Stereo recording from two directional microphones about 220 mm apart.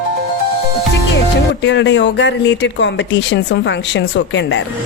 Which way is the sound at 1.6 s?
55° left (ahead or behind).